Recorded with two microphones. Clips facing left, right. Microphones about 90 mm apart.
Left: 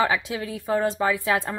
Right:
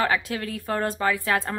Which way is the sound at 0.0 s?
15° left (ahead or behind).